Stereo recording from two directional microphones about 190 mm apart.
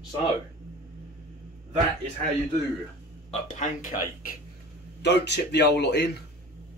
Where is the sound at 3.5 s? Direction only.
45° left (ahead or behind).